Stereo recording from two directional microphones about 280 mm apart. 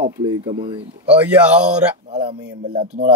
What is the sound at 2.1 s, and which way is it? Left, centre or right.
Speech, centre.